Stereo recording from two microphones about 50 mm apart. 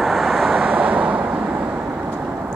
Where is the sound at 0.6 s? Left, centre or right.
Right.